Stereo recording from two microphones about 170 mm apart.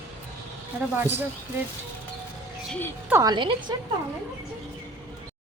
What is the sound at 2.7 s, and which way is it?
Speech, 10° left (ahead or behind).